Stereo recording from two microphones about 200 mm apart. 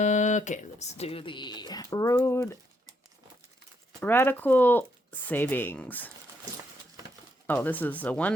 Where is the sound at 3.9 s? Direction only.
10° left (ahead or behind).